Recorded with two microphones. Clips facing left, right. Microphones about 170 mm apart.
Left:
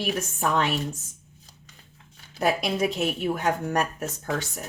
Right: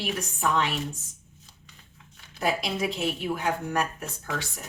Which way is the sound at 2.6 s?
50° left (ahead or behind).